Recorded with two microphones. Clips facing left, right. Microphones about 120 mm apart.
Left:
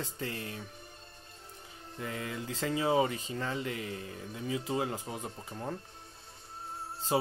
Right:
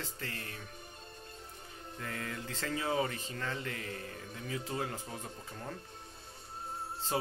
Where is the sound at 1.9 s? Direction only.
15° left (ahead or behind).